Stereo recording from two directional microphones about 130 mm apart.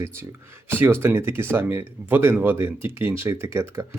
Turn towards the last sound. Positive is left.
turn(degrees=-20)  # may be behind; listen again after turning